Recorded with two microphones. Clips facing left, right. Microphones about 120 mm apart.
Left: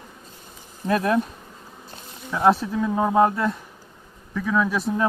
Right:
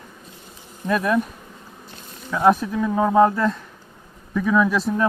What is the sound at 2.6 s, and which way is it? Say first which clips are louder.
Speech: right 2 dB; 15° left (ahead or behind).